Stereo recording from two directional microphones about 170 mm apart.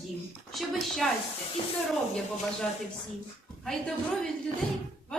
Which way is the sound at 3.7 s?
Centre (ahead or behind).